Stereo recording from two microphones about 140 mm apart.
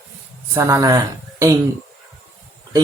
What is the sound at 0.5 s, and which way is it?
Speech, 20° right (ahead or behind).